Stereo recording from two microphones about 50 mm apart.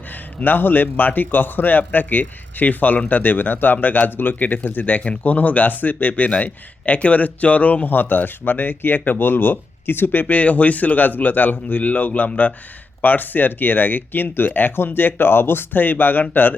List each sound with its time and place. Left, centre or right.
0.3 s a man's voice: left